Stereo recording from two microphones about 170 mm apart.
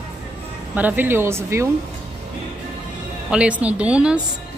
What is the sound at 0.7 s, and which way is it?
Speech, 10° right (ahead or behind).